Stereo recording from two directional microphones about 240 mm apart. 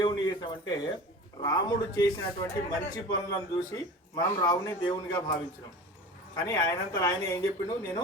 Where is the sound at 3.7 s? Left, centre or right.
Centre.